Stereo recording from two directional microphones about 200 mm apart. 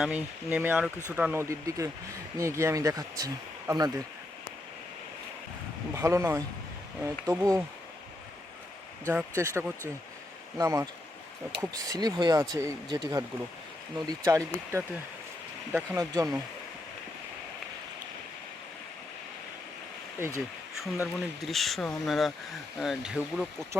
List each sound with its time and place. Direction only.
0.0 s speech: 5° right (ahead or behind)
5.9 s speech: 15° right (ahead or behind)
9.0 s speech: 15° right (ahead or behind)
14.3 s speech: 15° right (ahead or behind)
20.1 s speech: 10° right (ahead or behind)
20.8 s speech: centre (ahead or behind)